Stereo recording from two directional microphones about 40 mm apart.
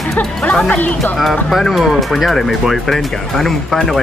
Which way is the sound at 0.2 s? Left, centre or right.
Left.